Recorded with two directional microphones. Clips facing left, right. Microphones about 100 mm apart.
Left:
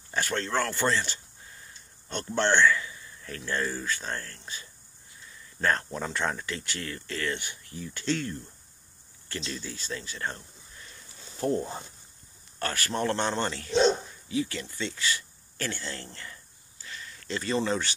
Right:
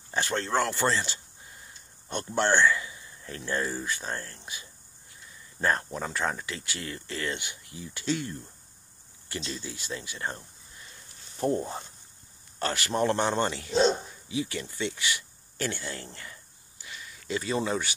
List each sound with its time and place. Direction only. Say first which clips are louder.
0.1 s speech: right 1 dB; 20° right (ahead or behind)
5.9 s speech: even; 5° right (ahead or behind)